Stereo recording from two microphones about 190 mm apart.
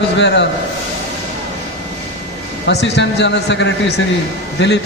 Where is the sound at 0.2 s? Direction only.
65° left (ahead or behind).